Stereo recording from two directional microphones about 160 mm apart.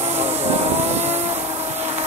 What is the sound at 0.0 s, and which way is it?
Vehicle, 40° right (ahead or behind).